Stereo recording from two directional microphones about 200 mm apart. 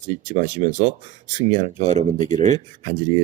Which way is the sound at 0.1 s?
35° right (ahead or behind).